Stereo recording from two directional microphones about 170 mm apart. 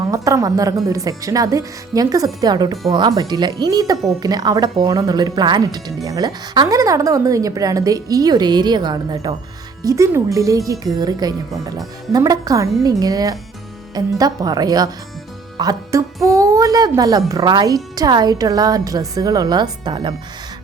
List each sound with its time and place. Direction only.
0.0 s speech: 20° right (ahead or behind)